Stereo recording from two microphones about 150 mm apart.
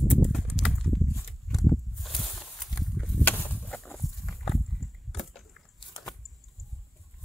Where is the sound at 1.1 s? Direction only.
20° left (ahead or behind).